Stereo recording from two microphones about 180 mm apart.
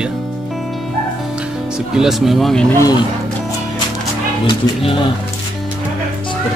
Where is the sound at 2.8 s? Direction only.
20° left (ahead or behind).